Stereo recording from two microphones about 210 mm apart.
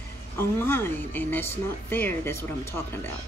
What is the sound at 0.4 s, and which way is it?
Speech, 10° left (ahead or behind).